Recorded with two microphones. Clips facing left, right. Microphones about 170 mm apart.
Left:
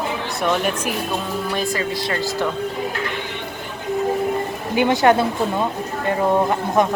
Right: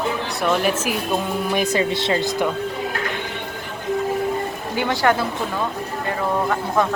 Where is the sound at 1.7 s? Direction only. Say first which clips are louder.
Right 3 dB; 25° right (ahead or behind).